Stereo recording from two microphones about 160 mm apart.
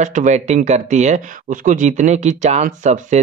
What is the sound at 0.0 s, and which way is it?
Speech, 50° right (ahead or behind).